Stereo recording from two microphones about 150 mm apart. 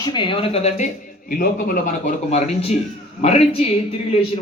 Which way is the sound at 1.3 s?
75° left (ahead or behind).